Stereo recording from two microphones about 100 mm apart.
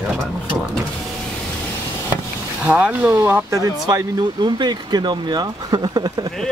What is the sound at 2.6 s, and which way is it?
Speech, 15° right (ahead or behind).